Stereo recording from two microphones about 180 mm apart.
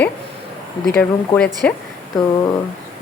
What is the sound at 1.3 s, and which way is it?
Speech, 5° left (ahead or behind).